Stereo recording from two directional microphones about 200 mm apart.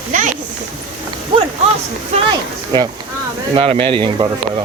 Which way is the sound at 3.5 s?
25° right (ahead or behind).